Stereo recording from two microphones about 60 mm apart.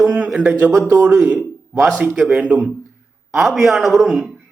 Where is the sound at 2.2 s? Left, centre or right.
Centre.